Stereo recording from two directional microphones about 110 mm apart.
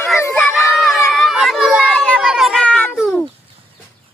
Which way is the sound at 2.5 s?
10° left (ahead or behind).